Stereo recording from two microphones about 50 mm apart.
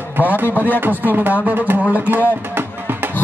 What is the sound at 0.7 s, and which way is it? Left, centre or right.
Speech, right.